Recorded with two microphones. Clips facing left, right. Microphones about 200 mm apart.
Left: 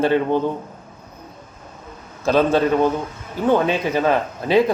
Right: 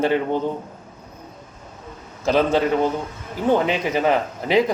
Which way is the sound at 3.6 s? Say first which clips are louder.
Left 1 dB; 15° right (ahead or behind).